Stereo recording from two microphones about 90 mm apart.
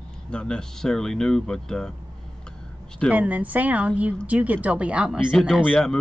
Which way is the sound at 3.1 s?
15° right (ahead or behind).